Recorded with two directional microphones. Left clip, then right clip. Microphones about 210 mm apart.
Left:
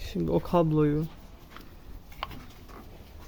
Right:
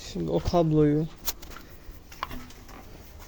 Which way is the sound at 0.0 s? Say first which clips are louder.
Even; 25° left (ahead or behind).